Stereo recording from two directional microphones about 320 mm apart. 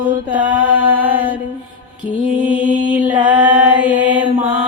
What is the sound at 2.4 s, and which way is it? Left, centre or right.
Mantra, centre.